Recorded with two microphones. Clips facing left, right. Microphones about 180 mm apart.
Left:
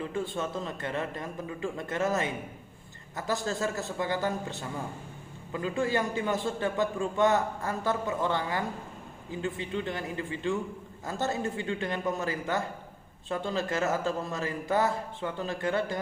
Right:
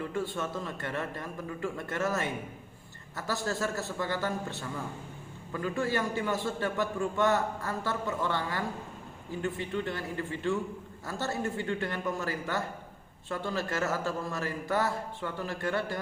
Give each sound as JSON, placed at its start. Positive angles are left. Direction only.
{"t": 0.0, "sound": "a man's voice", "side_deg": 20}